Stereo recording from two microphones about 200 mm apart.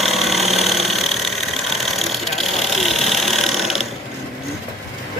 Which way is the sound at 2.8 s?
Centre (ahead or behind).